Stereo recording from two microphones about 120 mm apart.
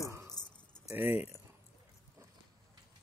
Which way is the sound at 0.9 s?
15° right (ahead or behind).